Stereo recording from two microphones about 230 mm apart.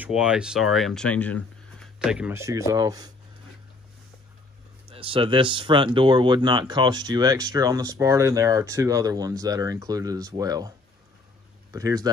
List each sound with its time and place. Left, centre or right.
0.0 s speech: centre
4.8 s speech: right
11.7 s speech: centre